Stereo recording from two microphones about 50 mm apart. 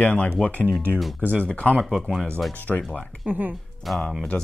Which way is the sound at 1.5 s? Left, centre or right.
Left.